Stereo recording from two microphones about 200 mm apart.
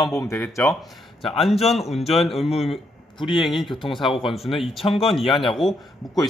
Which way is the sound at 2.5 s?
30° left (ahead or behind).